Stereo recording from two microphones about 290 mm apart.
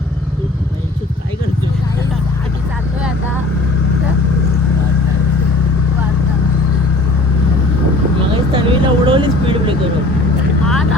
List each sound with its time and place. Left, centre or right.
8.3 s vehicle: centre